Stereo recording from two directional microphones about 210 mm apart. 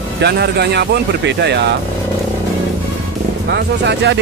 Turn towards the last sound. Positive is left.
turn(degrees=-55)  # may be behind; listen again after turning